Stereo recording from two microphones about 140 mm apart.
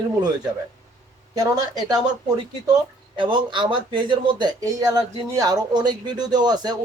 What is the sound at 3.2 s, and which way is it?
Speech, 35° right (ahead or behind).